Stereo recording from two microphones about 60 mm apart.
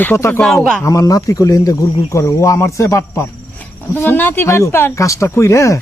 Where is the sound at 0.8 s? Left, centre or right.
Left.